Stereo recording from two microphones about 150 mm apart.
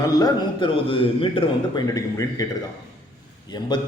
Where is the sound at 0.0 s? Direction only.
25° left (ahead or behind).